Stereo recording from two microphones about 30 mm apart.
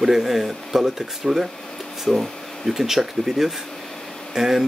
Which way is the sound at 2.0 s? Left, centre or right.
Centre.